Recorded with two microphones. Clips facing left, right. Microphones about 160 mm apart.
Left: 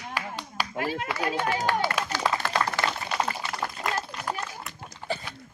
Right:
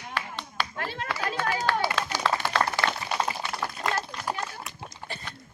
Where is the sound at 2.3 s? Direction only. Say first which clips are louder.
Even; 15° left (ahead or behind).